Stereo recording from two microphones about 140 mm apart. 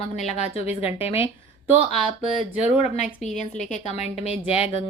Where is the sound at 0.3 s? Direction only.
50° left (ahead or behind).